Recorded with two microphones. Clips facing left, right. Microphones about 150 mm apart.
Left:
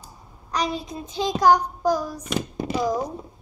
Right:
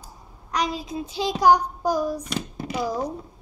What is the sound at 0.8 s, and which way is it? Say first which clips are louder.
Child singing: even; 10° right (ahead or behind).